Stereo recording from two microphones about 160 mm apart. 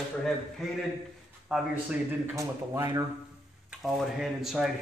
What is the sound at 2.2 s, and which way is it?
Speech, 20° right (ahead or behind).